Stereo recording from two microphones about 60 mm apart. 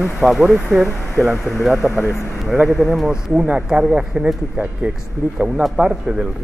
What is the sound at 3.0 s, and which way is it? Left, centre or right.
Speech, centre.